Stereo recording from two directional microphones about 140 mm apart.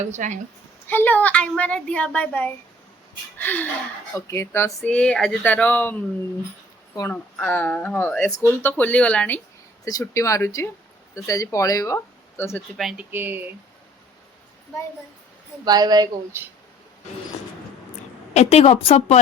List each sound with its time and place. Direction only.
0.0 s a woman's voice: 60° right (ahead or behind)
0.9 s speech: 15° left (ahead or behind)
4.9 s speech: 5° left (ahead or behind)
7.1 s speech: 15° left (ahead or behind)
9.8 s speech: 25° left (ahead or behind)
12.7 s speech: 5° right (ahead or behind)
13.1 s speech: 15° right (ahead or behind)
15.6 s a woman's voice: 30° right (ahead or behind)
18.3 s a woman's voice: 45° left (ahead or behind)